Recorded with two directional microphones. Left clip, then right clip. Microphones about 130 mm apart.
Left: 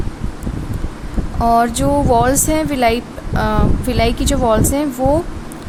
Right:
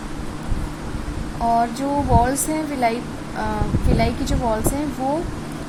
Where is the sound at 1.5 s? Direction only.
45° left (ahead or behind).